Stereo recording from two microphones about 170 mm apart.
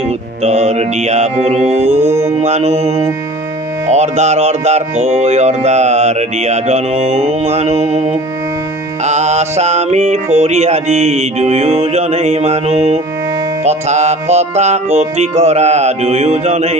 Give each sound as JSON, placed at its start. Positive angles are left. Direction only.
{"t": 0.4, "sound": "music", "side_deg": -40}